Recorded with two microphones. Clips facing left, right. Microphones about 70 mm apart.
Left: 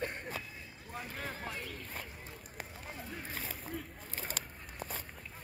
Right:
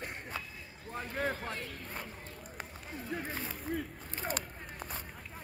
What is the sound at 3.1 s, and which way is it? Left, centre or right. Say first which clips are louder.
Speech: right 9 dB; right.